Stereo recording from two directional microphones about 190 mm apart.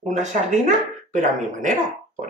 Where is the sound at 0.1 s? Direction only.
40° right (ahead or behind).